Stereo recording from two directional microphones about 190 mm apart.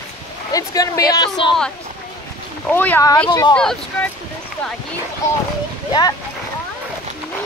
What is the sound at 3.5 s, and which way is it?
Speech, 5° left (ahead or behind).